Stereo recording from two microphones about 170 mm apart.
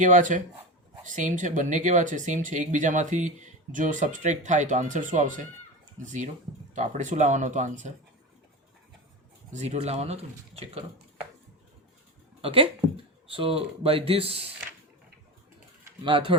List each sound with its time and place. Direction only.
0.0 s speech: 50° right (ahead or behind)
9.5 s speech: 40° right (ahead or behind)
12.4 s speech: 35° right (ahead or behind)
16.0 s speech: 30° right (ahead or behind)